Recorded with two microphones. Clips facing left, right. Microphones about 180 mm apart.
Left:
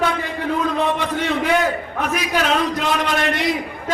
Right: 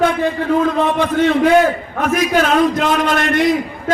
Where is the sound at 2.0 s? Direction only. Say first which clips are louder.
Right 7 dB; 50° right (ahead or behind).